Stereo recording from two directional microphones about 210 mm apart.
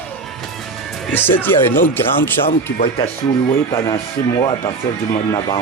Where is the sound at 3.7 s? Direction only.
15° left (ahead or behind).